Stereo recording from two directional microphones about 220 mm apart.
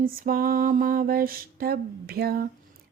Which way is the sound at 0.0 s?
40° right (ahead or behind).